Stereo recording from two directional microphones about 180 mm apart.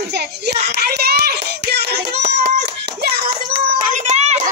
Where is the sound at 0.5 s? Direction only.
60° right (ahead or behind).